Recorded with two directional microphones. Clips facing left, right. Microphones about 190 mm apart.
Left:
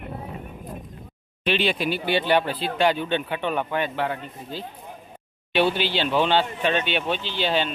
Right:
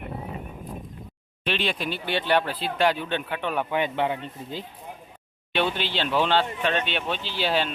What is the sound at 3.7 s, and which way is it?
Speech, 20° right (ahead or behind).